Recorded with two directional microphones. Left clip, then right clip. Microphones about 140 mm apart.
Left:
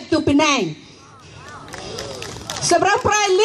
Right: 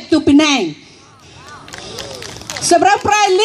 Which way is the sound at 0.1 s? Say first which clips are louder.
Right 5 dB; 50° right (ahead or behind).